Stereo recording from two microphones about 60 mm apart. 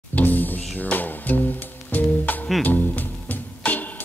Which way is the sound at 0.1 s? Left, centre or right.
Left.